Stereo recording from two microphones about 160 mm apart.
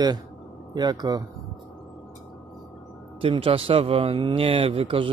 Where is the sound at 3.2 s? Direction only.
35° right (ahead or behind).